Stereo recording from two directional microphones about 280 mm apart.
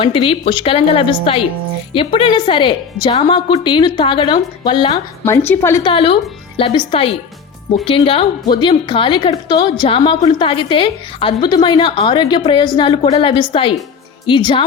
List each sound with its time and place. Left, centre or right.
0.0 s a woman's voice: centre